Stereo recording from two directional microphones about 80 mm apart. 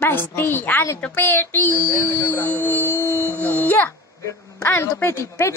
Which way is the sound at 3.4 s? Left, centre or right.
Left.